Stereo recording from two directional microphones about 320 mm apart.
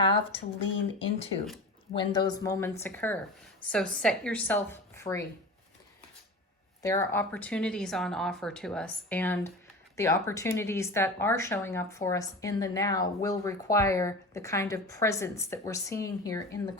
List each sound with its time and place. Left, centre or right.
0.6 s speech: centre
6.8 s speech: centre